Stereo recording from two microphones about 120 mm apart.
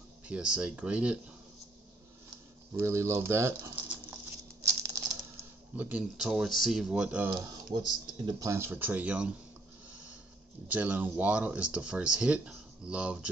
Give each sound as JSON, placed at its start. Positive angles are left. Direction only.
{"t": 0.3, "sound": "speech", "side_deg": -10}
{"t": 2.7, "sound": "speech", "side_deg": -25}
{"t": 3.9, "sound": "patter", "side_deg": -20}
{"t": 5.8, "sound": "speech", "side_deg": -15}
{"t": 6.2, "sound": "speech", "side_deg": 0}
{"t": 7.2, "sound": "speech", "side_deg": -45}
{"t": 8.3, "sound": "speech", "side_deg": -25}
{"t": 10.7, "sound": "speech", "side_deg": -15}